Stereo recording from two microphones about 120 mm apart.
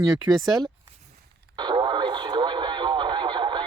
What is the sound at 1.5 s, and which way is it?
Radio, 40° right (ahead or behind).